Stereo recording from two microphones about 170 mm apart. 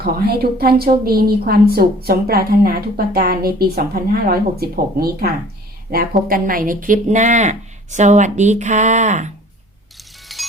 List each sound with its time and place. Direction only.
0.0 s a woman's voice: 65° right (ahead or behind); by 9.3 s 45° right (ahead or behind)
10.3 s music: centre (ahead or behind)